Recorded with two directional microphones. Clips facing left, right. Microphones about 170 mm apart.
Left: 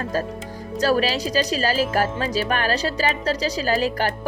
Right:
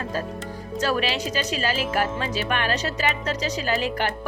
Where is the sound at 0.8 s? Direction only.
40° left (ahead or behind).